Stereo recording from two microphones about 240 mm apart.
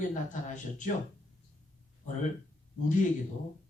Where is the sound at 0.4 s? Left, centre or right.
Left.